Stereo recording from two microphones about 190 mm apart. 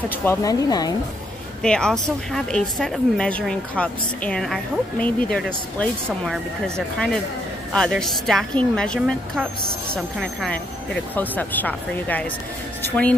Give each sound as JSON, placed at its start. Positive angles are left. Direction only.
{"t": 0.1, "sound": "a woman's voice", "side_deg": 10}
{"t": 1.6, "sound": "a woman's voice", "side_deg": 5}